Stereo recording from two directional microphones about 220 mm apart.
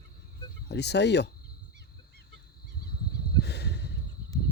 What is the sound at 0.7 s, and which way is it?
Speech, 50° left (ahead or behind).